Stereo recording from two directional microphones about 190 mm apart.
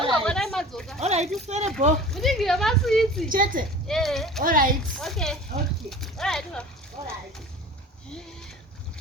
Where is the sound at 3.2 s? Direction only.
45° right (ahead or behind).